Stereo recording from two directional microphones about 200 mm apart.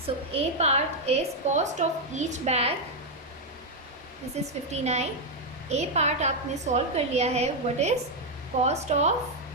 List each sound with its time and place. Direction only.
0.3 s a woman's voice: 30° right (ahead or behind)
4.4 s a woman's voice: 35° right (ahead or behind)